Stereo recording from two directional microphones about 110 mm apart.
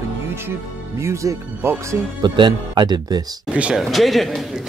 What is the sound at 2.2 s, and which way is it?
Speech, 45° right (ahead or behind).